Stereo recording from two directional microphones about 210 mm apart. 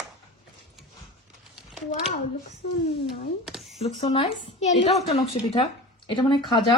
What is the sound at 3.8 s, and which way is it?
A woman's voice, 30° left (ahead or behind).